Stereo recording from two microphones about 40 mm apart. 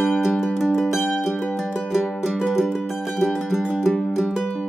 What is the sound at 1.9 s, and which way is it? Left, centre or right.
Music, centre.